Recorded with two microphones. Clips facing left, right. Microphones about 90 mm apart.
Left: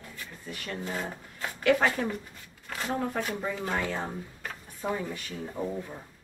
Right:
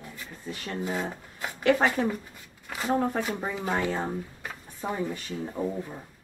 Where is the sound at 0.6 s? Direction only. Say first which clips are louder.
Right 3 dB; 5° right (ahead or behind).